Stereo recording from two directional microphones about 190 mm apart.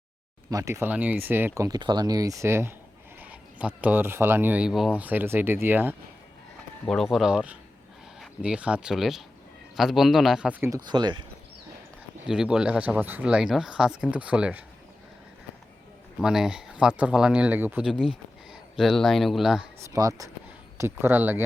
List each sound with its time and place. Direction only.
0.5 s speech: 15° right (ahead or behind)
6.8 s speech: centre (ahead or behind); by 11.3 s 25° right (ahead or behind)
12.3 s speech: 5° right (ahead or behind)
16.2 s speech: 5° right (ahead or behind)
19.8 s speech: 15° right (ahead or behind)